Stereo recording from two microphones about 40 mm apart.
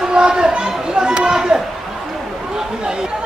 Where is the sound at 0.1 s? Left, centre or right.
Right.